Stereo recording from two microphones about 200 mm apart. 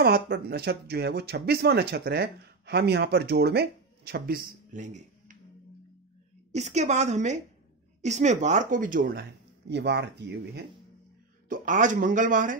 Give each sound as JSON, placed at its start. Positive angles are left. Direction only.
{"t": 0.0, "sound": "speech", "side_deg": -50}
{"t": 4.7, "sound": "a sound", "side_deg": -40}
{"t": 6.5, "sound": "a woman's voice", "side_deg": -35}
{"t": 9.7, "sound": "speech", "side_deg": -60}
{"t": 11.4, "sound": "a woman's voice", "side_deg": -40}